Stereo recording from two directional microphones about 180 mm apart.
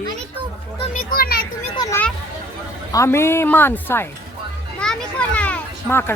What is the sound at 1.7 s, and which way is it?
A child's voice, 20° left (ahead or behind).